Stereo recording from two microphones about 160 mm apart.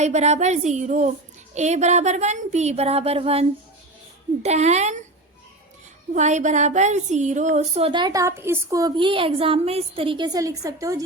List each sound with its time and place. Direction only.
0.0 s a woman's voice: 45° right (ahead or behind)
4.4 s a woman's voice: 45° right (ahead or behind)
6.1 s a woman's voice: 50° right (ahead or behind); by 11.0 s 20° right (ahead or behind)